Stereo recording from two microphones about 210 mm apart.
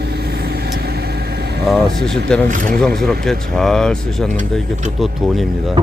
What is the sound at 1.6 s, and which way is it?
Speech, centre (ahead or behind).